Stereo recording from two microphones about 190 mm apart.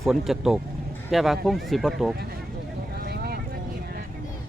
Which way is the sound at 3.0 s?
55° right (ahead or behind).